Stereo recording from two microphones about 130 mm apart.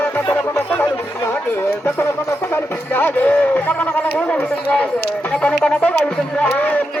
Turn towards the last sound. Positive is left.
turn(degrees=10)  # may be behind; listen again after turning